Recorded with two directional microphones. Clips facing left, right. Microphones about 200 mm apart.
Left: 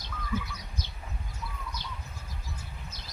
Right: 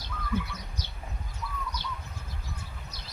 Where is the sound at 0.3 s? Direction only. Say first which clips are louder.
Right 2 dB; 60° right (ahead or behind).